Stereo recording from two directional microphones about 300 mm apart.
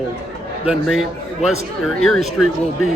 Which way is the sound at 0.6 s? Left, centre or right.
Centre.